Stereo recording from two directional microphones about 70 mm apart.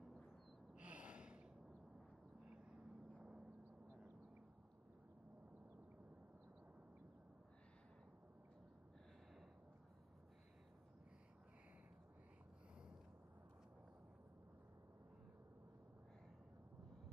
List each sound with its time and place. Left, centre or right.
0.7 s gasp: centre
2.5 s vehicle: right